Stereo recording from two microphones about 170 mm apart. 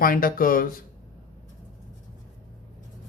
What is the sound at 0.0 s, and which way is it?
Speech, 55° left (ahead or behind).